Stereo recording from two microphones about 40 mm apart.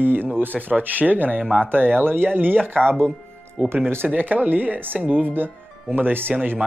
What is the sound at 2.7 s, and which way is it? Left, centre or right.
Speech, left.